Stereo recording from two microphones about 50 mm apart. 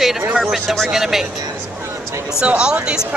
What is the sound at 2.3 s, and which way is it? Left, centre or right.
Speech, centre.